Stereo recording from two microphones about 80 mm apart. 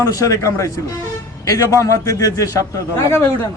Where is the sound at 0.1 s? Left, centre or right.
Left.